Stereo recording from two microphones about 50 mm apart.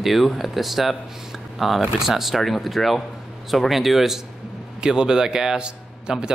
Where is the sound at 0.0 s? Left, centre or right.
Centre.